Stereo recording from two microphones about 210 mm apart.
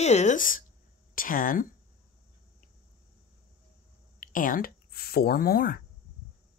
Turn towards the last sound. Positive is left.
turn(degrees=45)  # may be behind; listen again after turning